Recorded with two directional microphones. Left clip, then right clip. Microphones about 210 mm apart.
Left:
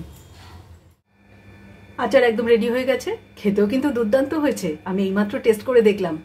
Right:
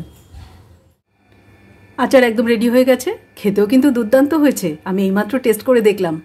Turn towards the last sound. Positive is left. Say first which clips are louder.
# right 3 dB
turn(degrees=-50)  # may be behind; listen again after turning